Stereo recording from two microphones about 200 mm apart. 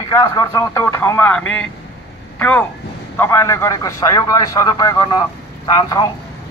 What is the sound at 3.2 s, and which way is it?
A man's voice, 15° left (ahead or behind).